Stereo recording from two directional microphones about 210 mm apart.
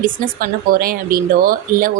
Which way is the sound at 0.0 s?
40° right (ahead or behind).